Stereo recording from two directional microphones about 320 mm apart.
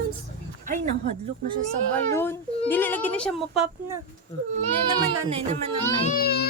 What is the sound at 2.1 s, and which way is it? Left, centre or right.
Speech, centre.